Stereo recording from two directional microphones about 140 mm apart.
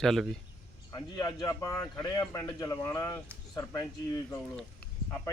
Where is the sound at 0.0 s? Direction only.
Centre (ahead or behind).